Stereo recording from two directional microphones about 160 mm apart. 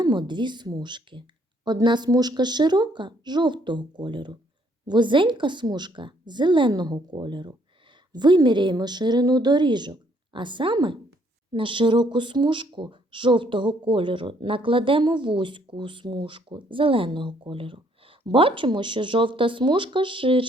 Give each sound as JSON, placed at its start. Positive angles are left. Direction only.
{"t": 0.0, "sound": "a woman's voice", "side_deg": -30}